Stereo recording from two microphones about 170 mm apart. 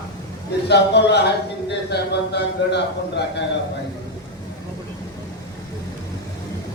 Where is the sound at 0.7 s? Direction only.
80° left.